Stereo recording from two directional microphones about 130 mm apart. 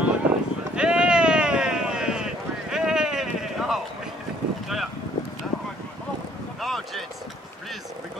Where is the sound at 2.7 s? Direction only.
5° right (ahead or behind).